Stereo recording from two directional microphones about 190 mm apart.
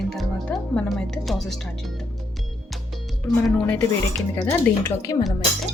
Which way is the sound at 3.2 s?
5° left (ahead or behind).